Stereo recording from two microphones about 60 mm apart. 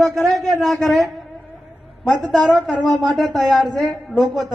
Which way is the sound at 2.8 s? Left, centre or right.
Left.